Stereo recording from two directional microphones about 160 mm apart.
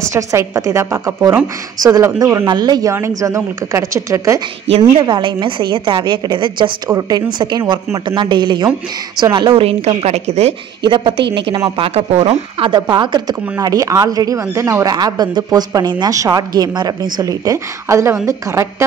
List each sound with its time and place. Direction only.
0.0 s speech: 20° right (ahead or behind)
4.6 s a woman's voice: 35° right (ahead or behind)
10.9 s a woman's voice: 30° right (ahead or behind)
11.8 s a woman's voice: 40° right (ahead or behind); by 18.9 s 20° right (ahead or behind)